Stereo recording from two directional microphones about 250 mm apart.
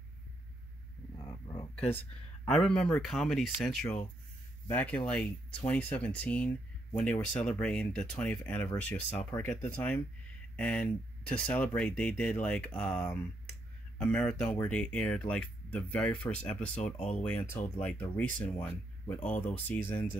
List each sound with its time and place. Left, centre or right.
1.1 s a sound: centre
2.0 s speech: centre
16.9 s speech: left
17.2 s speech: centre